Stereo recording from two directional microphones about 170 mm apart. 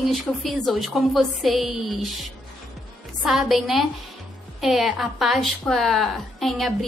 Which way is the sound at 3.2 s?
Centre (ahead or behind).